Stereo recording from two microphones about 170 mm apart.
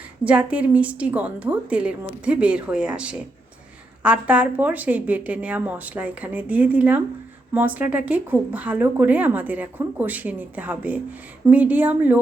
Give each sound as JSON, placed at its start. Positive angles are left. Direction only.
{"t": 0.3, "sound": "speech", "side_deg": -10}